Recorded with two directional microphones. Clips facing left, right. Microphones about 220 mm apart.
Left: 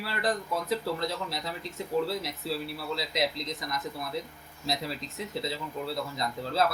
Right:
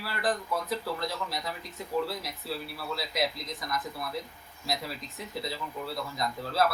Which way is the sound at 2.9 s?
20° left (ahead or behind).